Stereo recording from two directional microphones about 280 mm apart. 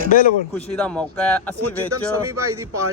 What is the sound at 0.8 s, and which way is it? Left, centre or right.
Speech, centre.